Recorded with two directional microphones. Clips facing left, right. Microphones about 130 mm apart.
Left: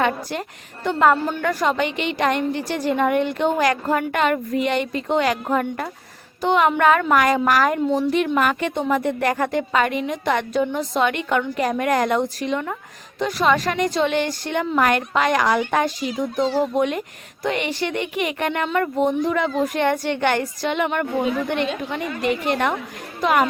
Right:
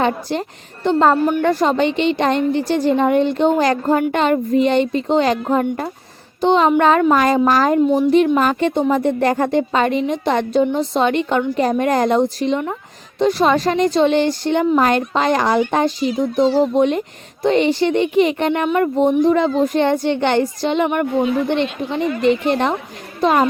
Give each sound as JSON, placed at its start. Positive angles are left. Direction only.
{"t": 0.0, "sound": "a woman's voice", "side_deg": -25}